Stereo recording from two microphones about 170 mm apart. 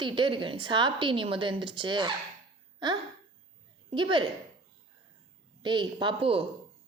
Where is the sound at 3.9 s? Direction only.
30° right (ahead or behind).